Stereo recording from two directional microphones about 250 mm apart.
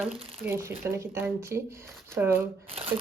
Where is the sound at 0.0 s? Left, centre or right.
Centre.